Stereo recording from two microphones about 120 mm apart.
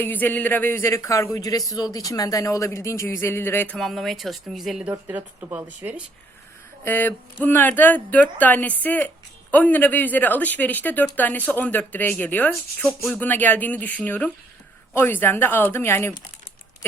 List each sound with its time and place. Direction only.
0.0 s speech: 15° left (ahead or behind)
3.8 s speech: centre (ahead or behind)
4.9 s speech: 15° right (ahead or behind)
6.8 s speech: 15° left (ahead or behind)